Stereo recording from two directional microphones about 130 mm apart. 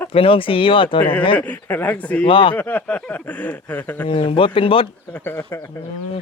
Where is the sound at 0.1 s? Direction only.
45° left (ahead or behind).